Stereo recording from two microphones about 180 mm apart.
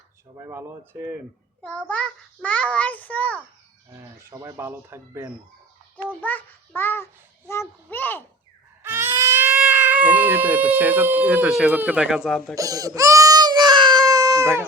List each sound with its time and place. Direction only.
0.3 s speech: 15° right (ahead or behind)
1.6 s a child's voice: 5° left (ahead or behind)
3.9 s speech: 15° right (ahead or behind)
6.2 s a child's voice: 10° left (ahead or behind)
8.8 s speech: 10° right (ahead or behind)
12.5 s baby cry: 20° right (ahead or behind)